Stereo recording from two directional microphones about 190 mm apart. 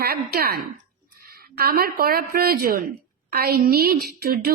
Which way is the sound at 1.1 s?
50° right (ahead or behind).